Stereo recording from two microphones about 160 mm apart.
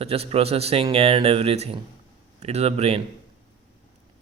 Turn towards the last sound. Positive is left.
turn(degrees=-40)  # may be behind; listen again after turning